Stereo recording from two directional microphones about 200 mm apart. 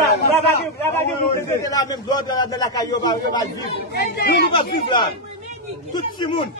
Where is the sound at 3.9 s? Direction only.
45° left (ahead or behind).